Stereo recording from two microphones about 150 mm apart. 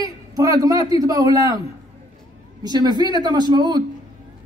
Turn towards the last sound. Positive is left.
turn(degrees=-30)  # may be behind; listen again after turning